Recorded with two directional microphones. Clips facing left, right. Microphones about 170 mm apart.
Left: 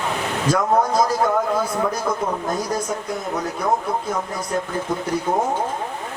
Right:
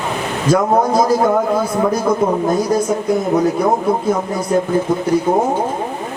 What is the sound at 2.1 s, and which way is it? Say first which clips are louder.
Speech: right 8 dB; 25° right (ahead or behind).